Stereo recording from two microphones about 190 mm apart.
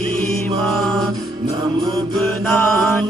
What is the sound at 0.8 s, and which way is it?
Chant, centre (ahead or behind).